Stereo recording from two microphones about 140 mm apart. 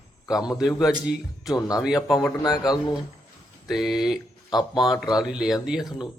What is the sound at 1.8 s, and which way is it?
Speech, 5° right (ahead or behind).